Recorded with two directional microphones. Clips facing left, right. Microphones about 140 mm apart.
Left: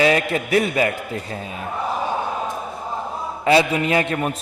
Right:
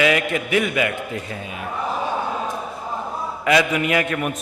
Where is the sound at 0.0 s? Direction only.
35° left (ahead or behind).